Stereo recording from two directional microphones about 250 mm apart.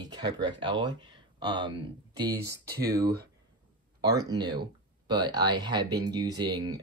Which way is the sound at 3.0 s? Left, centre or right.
Right.